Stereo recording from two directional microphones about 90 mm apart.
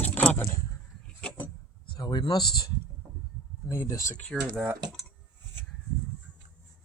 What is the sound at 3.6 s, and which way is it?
Speech, 30° left (ahead or behind).